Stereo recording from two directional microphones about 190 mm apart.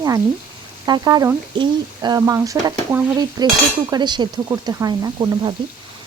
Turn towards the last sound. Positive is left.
turn(degrees=-20)  # may be behind; listen again after turning